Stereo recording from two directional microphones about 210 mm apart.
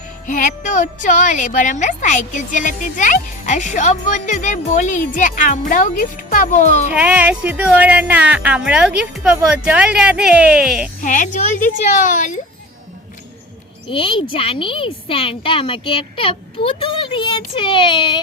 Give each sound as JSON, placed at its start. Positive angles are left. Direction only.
{"t": 0.3, "sound": "a woman's voice", "side_deg": 40}
{"t": 6.9, "sound": "speech", "side_deg": -5}
{"t": 11.0, "sound": "a woman's voice", "side_deg": 35}
{"t": 13.8, "sound": "speech", "side_deg": 25}